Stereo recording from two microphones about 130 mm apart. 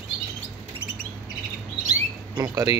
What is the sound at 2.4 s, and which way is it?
Speech, 30° right (ahead or behind).